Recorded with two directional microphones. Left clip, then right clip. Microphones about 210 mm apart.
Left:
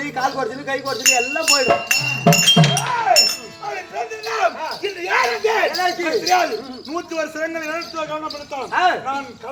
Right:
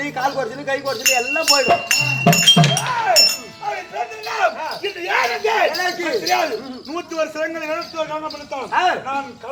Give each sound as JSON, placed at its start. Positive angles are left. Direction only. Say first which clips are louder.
{"t": 0.0, "sound": "a man's voice", "louder": "even", "side_deg": -5}
{"t": 5.7, "sound": "speech", "louder": "left 1 dB", "side_deg": -10}
{"t": 6.1, "sound": "a man's voice", "louder": "left 1 dB", "side_deg": 10}
{"t": 8.7, "sound": "speech", "louder": "even", "side_deg": -10}